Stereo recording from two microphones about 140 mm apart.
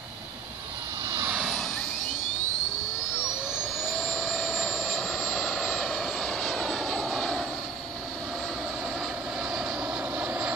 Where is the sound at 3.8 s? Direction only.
5° left (ahead or behind).